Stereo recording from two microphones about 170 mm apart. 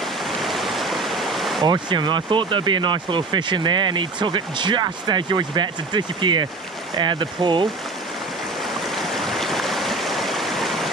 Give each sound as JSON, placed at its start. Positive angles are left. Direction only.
{"t": 0.4, "sound": "stream", "side_deg": 0}
{"t": 1.6, "sound": "speech", "side_deg": -25}
{"t": 8.8, "sound": "stream", "side_deg": 0}